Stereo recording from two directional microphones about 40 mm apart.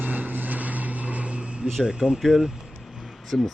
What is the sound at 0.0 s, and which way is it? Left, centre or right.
Vehicle, right.